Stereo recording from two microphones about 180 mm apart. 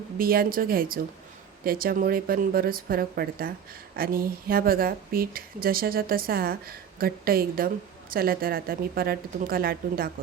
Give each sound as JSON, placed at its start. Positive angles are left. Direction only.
{"t": 0.2, "sound": "speech", "side_deg": -55}